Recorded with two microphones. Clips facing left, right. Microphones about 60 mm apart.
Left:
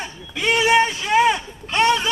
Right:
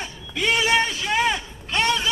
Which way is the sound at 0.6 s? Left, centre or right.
Centre.